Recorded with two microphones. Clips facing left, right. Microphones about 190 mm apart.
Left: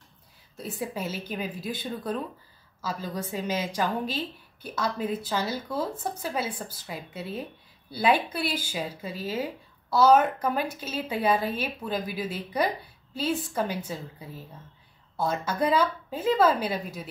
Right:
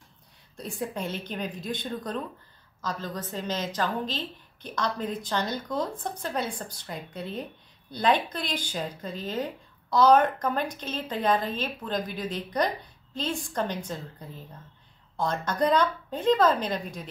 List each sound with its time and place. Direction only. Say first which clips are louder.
0.6 s speech: even; 5° left (ahead or behind)